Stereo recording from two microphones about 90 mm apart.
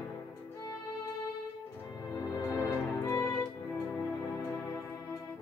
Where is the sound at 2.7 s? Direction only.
30° left (ahead or behind).